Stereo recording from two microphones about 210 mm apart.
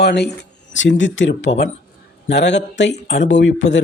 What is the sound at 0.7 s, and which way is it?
Speech, 65° left (ahead or behind).